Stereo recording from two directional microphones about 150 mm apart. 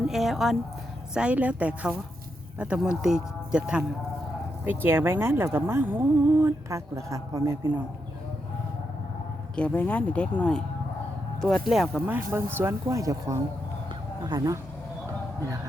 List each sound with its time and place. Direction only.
0.1 s speech: centre (ahead or behind); by 7.7 s 20° right (ahead or behind)
9.6 s speech: 10° left (ahead or behind)
12.0 s speech: 15° right (ahead or behind)